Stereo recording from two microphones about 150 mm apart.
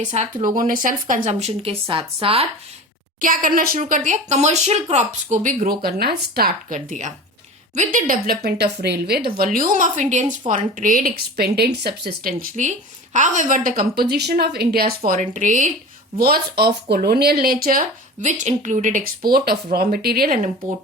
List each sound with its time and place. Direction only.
0.4 s speech: 65° right (ahead or behind); by 2.5 s 40° right (ahead or behind)
3.2 s speech: 65° right (ahead or behind); by 6.7 s 90° right
7.9 s a woman's voice: 70° right (ahead or behind)
8.4 s a woman's voice: 90° right
15.2 s speech: 55° right (ahead or behind)
16.1 s speech: 90° right